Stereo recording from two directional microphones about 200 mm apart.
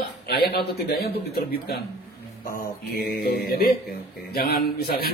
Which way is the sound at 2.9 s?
50° left (ahead or behind).